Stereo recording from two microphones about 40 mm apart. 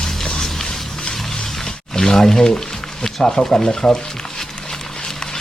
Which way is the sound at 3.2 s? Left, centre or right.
Centre.